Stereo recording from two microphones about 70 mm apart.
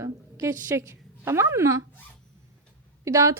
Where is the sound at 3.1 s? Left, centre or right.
Right.